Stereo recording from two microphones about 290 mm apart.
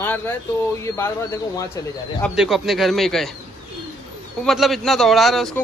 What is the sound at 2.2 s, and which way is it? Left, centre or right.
Speech, centre.